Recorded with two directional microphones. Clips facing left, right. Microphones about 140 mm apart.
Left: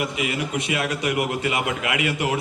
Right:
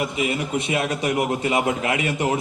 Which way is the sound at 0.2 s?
25° right (ahead or behind).